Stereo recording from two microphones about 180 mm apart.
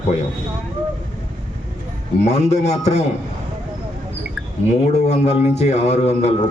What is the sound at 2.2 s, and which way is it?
Speech, 40° left (ahead or behind).